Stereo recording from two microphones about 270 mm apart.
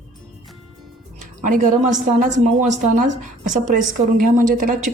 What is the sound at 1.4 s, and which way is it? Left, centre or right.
Speech, right.